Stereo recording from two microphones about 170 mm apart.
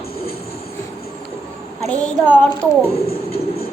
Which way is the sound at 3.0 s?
65° left (ahead or behind).